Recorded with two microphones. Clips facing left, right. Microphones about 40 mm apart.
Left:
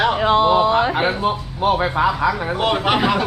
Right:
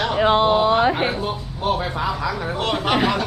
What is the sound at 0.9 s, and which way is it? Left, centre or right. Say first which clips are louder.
A man's voice: left 3 dB; left.